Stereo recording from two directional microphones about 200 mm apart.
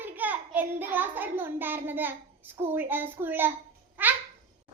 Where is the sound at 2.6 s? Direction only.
10° right (ahead or behind).